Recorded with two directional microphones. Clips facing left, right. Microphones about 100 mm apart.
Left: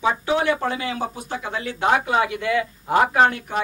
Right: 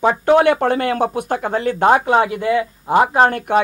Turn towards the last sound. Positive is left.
turn(degrees=-25)  # may be behind; listen again after turning